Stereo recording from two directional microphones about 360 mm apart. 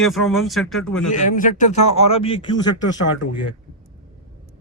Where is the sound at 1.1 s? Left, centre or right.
Left.